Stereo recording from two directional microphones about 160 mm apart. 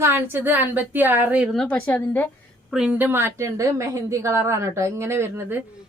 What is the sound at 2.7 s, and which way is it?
A woman's voice, 5° right (ahead or behind).